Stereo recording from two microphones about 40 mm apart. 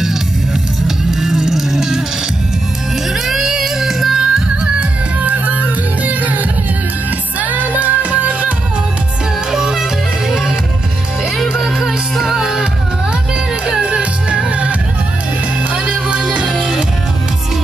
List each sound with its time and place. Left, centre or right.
0.8 s music: centre
3.3 s child singing: centre
5.2 s music: right
9.5 s music: centre
11.6 s music: centre
12.4 s music: centre
13.7 s music: right